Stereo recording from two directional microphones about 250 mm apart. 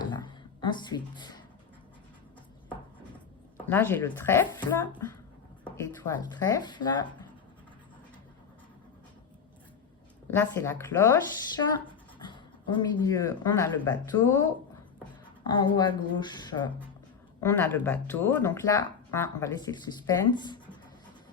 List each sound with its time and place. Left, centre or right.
0.1 s a sound: centre
3.7 s speech: centre
10.3 s speech: centre
15.4 s speech: centre
17.4 s speech: centre